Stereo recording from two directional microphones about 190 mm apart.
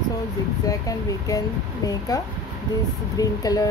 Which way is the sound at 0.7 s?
20° left (ahead or behind).